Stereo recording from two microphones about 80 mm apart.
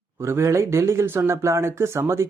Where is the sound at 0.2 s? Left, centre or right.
Right.